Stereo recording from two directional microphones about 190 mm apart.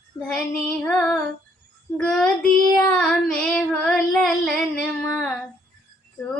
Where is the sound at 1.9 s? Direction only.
5° left (ahead or behind).